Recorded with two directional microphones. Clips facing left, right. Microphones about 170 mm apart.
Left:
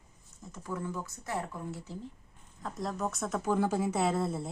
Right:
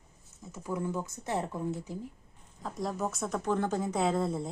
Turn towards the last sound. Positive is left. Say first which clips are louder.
# right 1 dB
turn(degrees=5)  # may be behind; listen again after turning